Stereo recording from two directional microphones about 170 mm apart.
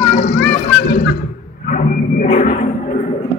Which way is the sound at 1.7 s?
50° left (ahead or behind).